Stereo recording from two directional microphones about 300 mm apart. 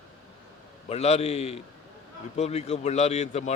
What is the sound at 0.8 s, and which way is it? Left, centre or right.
Speech, left.